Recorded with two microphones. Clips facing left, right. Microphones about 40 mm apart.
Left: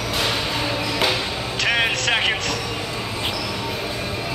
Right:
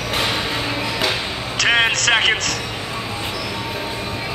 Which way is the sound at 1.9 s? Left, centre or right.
Right.